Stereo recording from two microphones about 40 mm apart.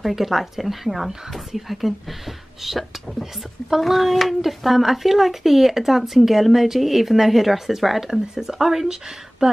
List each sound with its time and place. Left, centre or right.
0.0 s speech: centre
9.4 s speech: centre